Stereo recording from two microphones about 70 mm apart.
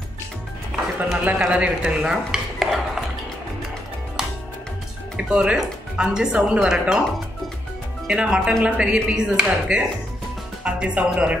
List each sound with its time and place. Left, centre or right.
0.7 s music: centre
1.4 s stir: centre
5.1 s speech: centre
8.1 s speech: centre